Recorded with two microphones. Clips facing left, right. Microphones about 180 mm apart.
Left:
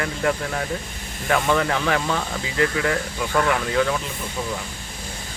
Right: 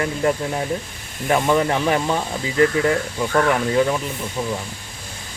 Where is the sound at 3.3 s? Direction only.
20° right (ahead or behind).